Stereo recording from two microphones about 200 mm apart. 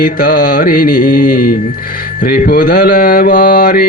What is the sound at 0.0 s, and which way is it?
Mantra, 45° left (ahead or behind).